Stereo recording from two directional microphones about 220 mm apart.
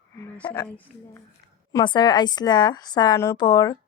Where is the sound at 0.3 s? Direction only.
10° left (ahead or behind).